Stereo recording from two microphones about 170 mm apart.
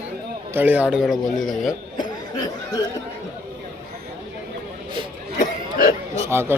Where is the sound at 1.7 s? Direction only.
25° left (ahead or behind).